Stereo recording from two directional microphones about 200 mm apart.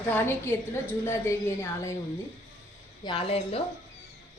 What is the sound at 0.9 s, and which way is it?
Speech, 10° left (ahead or behind).